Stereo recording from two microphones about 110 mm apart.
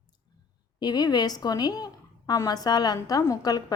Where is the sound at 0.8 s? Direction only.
40° left (ahead or behind).